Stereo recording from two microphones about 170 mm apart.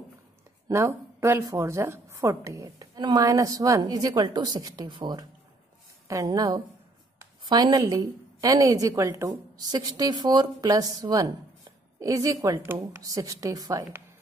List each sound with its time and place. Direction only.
0.7 s a woman's voice: 15° right (ahead or behind)